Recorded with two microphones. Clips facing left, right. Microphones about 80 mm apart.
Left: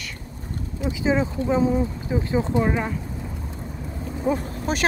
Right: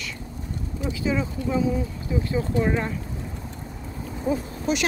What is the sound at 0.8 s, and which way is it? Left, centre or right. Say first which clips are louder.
Speech: left 4 dB; left.